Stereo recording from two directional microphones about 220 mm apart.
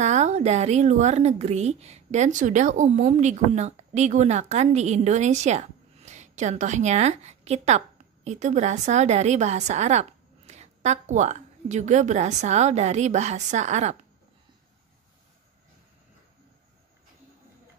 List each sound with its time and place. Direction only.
0.0 s a woman's voice: 30° right (ahead or behind)